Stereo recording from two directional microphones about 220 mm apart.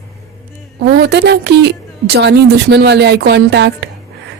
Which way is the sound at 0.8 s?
45° right (ahead or behind).